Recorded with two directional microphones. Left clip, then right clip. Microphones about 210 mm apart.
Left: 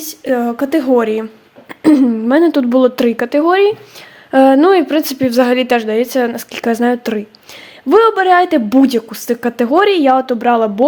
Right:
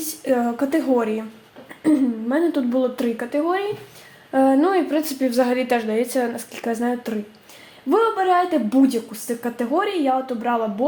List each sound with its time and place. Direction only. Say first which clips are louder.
0.0 s a woman's voice: left 5 dB; 35° left (ahead or behind); by 10.8 s 50° left (ahead or behind)